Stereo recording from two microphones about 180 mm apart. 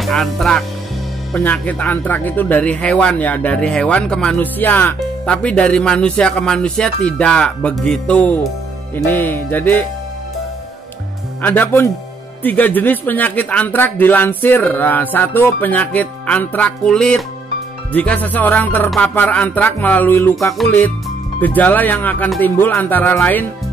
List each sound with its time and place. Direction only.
0.0 s speech: centre (ahead or behind)
11.4 s speech: 10° left (ahead or behind)